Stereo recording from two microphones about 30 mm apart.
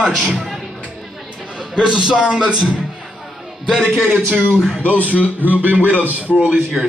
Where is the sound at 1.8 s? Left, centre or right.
Right.